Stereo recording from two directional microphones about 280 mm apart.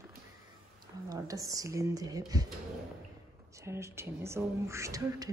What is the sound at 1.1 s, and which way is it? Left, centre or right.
Speech, centre.